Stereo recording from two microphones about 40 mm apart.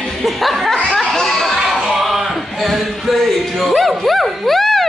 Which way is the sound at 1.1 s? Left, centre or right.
Centre.